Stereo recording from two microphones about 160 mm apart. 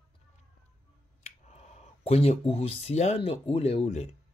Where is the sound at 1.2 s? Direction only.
45° left (ahead or behind).